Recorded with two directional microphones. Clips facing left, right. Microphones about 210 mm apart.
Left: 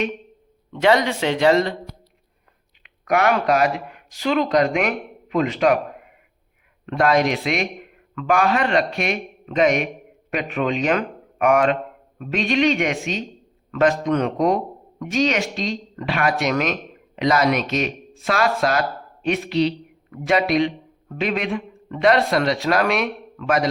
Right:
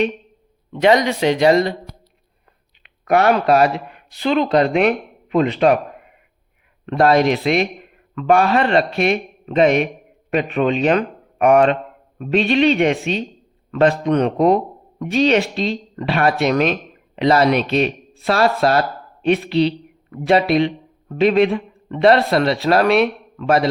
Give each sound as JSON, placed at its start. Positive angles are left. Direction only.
{"t": 0.7, "sound": "speech", "side_deg": -15}
{"t": 2.8, "sound": "speech", "side_deg": -30}
{"t": 6.8, "sound": "a man's voice", "side_deg": -30}